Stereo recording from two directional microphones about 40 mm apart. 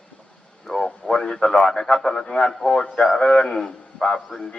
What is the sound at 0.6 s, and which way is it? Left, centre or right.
A man's voice, centre.